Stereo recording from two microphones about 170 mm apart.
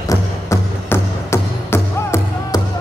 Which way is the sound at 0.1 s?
15° left (ahead or behind).